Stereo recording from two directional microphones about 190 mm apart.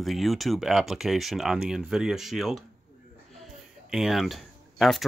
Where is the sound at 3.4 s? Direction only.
Centre (ahead or behind).